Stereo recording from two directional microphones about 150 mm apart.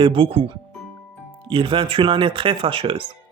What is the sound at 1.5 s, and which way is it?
Speech, 35° right (ahead or behind).